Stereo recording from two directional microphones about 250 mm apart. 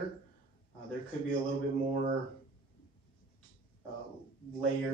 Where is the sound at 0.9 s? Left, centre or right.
Left.